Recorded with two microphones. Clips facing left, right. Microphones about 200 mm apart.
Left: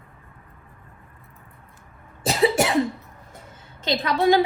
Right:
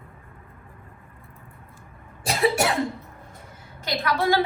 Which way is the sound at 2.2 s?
20° left (ahead or behind).